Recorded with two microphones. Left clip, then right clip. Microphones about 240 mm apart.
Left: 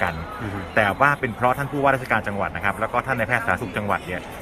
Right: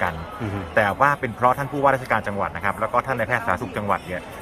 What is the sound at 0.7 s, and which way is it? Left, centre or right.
A man's voice, centre.